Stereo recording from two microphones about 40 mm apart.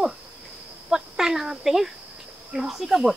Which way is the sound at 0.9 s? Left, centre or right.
Centre.